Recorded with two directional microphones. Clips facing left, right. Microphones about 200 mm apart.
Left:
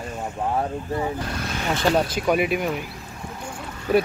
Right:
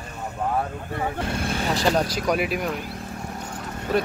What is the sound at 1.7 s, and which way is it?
Speech, 5° left (ahead or behind).